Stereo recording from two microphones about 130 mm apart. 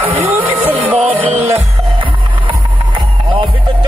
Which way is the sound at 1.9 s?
40° right (ahead or behind).